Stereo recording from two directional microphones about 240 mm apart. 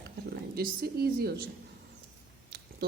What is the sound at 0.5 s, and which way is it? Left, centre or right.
Speech, right.